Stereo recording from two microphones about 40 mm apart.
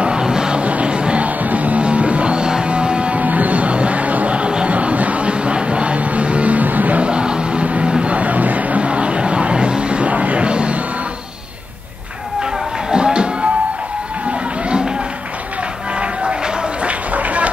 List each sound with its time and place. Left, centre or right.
0.0 s music: right
0.6 s music: right
1.4 s music: right
3.3 s music: right
7.0 s music: right
7.6 s a sound: right
12.9 s music: right
16.8 s run: right